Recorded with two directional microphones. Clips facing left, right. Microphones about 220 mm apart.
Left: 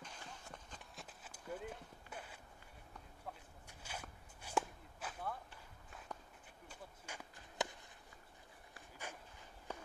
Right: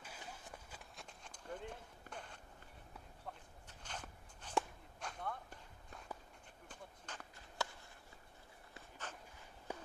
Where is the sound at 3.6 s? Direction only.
10° left (ahead or behind).